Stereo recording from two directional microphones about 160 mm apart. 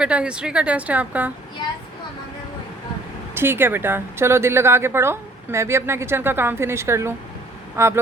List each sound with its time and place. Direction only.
0.0 s a woman's voice: 5° right (ahead or behind)
3.3 s a woman's voice: 15° right (ahead or behind)